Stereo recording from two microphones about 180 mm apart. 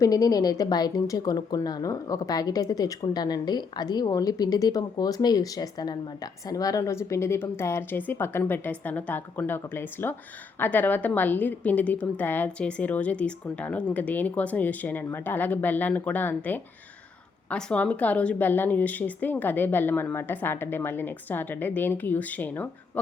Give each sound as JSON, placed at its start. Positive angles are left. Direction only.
{"t": 0.0, "sound": "a woman's voice", "side_deg": 20}